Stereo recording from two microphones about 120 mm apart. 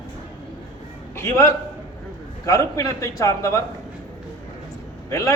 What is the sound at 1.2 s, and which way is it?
A man's voice, 25° left (ahead or behind).